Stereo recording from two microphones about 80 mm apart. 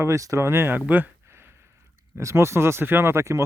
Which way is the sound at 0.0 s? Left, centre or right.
Right.